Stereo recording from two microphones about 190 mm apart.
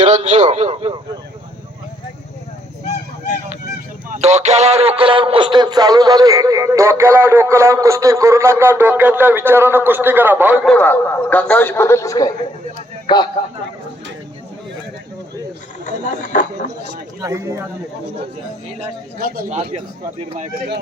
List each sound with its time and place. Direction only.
0.0 s a man's voice: 35° right (ahead or behind)
4.1 s a man's voice: 35° right (ahead or behind); by 10.7 s 5° right (ahead or behind)
10.7 s a man's voice: 10° left (ahead or behind)
16.2 s speech: 40° left (ahead or behind)
17.2 s a man's voice: 15° right (ahead or behind)
19.5 s a man's voice: 35° right (ahead or behind)